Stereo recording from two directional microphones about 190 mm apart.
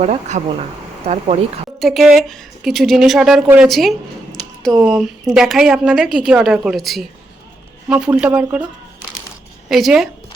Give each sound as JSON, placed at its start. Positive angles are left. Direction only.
{"t": 0.0, "sound": "speech", "side_deg": -40}
{"t": 1.8, "sound": "a woman's voice", "side_deg": 0}
{"t": 9.6, "sound": "a woman's voice", "side_deg": 0}